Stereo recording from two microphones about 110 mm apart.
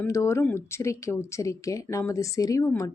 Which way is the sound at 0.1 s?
30° left (ahead or behind).